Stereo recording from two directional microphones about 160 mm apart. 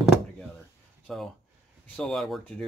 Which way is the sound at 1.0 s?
5° left (ahead or behind).